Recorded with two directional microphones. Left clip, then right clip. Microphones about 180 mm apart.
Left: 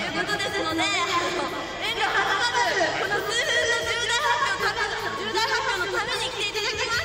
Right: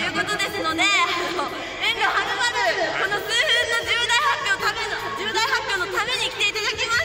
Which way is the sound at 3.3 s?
25° right (ahead or behind).